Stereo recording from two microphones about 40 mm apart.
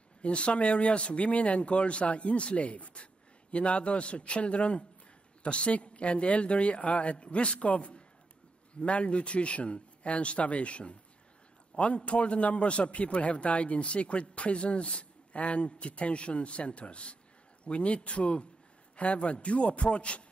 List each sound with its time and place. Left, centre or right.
0.2 s a man's voice: left